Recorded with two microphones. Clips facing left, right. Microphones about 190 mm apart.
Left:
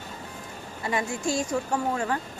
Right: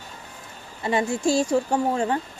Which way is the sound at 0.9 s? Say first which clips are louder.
Right 6 dB; 30° right (ahead or behind).